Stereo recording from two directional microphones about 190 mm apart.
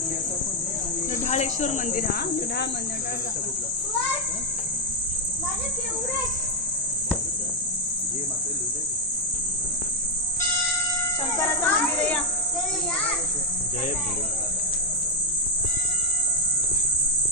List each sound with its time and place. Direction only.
1.2 s speech: 40° left (ahead or behind)
11.3 s speech: 15° left (ahead or behind)